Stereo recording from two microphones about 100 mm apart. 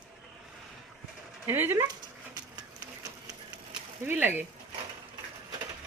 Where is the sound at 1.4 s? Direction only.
25° right (ahead or behind).